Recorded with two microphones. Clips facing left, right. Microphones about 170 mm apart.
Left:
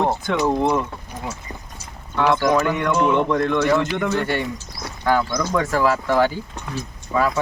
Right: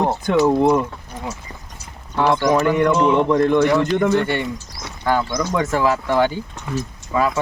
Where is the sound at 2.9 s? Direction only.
Centre (ahead or behind).